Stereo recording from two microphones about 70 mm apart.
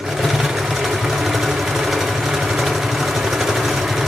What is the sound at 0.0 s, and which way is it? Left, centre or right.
Sewing machine, centre.